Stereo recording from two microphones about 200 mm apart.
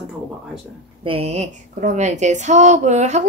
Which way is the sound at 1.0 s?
30° right (ahead or behind).